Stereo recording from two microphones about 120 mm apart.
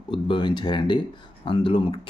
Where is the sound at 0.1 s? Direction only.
40° left (ahead or behind).